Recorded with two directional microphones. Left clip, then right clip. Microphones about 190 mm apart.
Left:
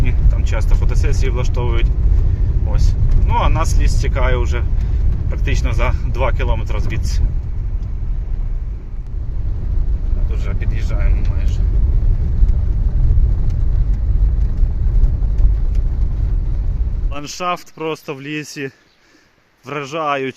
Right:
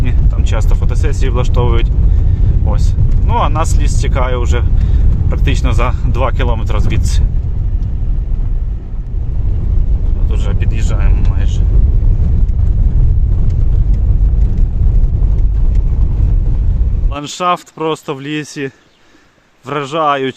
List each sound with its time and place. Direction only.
0.0 s speech: 15° right (ahead or behind)
17.1 s speech: centre (ahead or behind)